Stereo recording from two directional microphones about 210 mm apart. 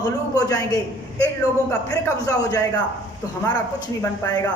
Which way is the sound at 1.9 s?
15° left (ahead or behind).